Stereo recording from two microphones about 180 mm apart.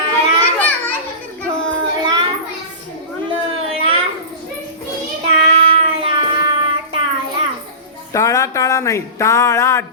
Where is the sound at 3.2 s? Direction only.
30° right (ahead or behind).